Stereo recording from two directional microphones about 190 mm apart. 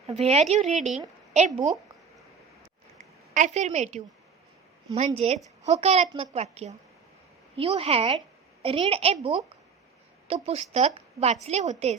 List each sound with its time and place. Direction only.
0.1 s speech: 35° right (ahead or behind)
3.3 s speech: 40° right (ahead or behind)